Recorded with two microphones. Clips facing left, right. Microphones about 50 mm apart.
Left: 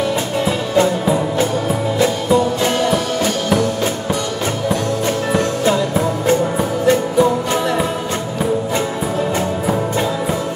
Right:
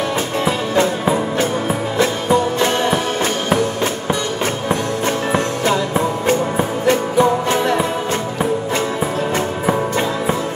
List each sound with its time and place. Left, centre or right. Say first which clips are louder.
0.5 s music: left 1 dB; right
9.7 s music: right 2 dB; right